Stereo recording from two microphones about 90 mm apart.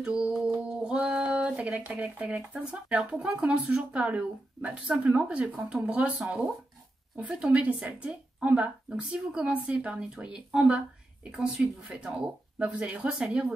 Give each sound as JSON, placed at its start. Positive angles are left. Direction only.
{"t": 0.0, "sound": "speech", "side_deg": -10}
{"t": 0.8, "sound": "a sound", "side_deg": -10}
{"t": 1.8, "sound": "speech", "side_deg": -20}